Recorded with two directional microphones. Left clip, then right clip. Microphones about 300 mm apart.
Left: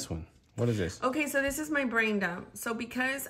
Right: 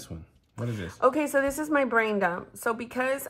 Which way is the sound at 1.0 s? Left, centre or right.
Centre.